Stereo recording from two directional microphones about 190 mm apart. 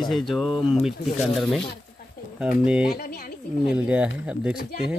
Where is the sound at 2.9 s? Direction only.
55° left (ahead or behind).